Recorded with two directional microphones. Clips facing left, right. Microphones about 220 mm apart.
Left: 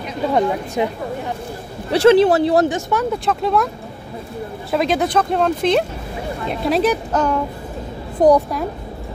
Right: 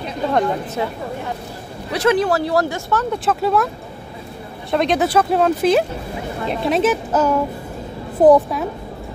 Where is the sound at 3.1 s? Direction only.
5° right (ahead or behind).